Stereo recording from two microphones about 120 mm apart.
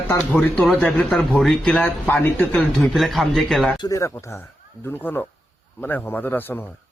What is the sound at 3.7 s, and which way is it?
Speech, 40° left (ahead or behind).